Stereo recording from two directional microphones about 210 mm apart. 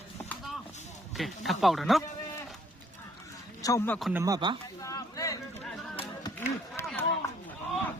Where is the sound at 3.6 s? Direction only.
10° left (ahead or behind).